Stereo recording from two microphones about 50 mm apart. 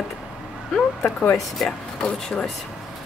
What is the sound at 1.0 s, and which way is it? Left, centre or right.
Speech, left.